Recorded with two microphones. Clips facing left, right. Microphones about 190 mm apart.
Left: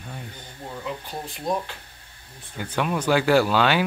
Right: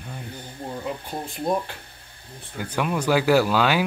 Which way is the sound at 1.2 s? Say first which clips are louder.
Right 2 dB; 50° right (ahead or behind).